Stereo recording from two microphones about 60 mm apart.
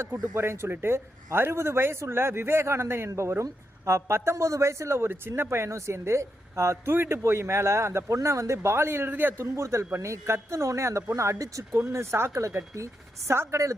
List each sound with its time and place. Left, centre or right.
0.1 s speech: right
6.9 s a man's voice: right
9.4 s speech: right
11.7 s speech: right
12.3 s a woman's voice: right